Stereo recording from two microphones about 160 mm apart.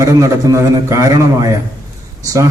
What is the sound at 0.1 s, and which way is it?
A man's voice, 20° right (ahead or behind).